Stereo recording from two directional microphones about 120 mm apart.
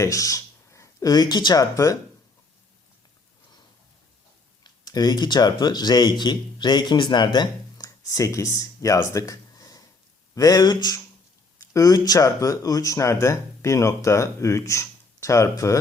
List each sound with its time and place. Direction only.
0.0 s speech: 30° left (ahead or behind)
4.6 s speech: 35° left (ahead or behind)